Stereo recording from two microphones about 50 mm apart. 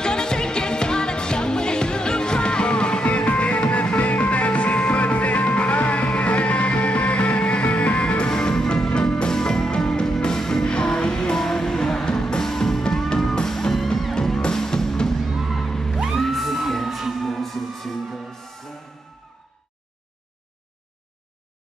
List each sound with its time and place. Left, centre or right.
0.0 s music: centre